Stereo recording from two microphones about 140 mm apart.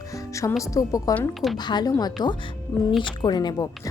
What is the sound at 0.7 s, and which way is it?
Speech, 25° left (ahead or behind).